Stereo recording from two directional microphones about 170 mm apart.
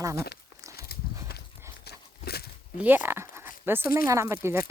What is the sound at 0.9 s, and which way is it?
Horse, 65° left (ahead or behind).